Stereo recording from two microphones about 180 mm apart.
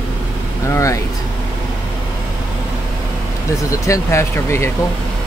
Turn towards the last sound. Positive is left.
turn(degrees=15)  # may be behind; listen again after turning